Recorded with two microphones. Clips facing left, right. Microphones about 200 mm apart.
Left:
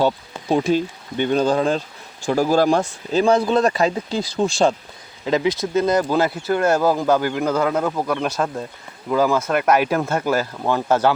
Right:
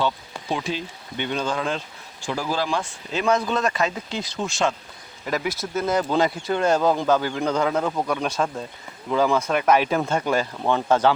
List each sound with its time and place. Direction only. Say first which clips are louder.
0.0 s speech: left 5 dB; 40° left (ahead or behind)
5.2 s speech: left 7 dB; 20° left (ahead or behind)